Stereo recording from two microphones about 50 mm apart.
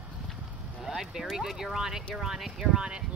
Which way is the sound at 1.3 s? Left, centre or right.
Centre.